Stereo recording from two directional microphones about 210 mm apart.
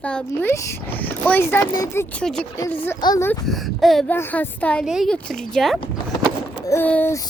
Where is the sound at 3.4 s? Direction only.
Centre (ahead or behind).